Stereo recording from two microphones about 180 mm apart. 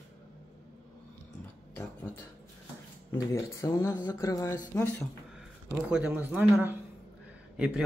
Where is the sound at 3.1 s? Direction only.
15° left (ahead or behind).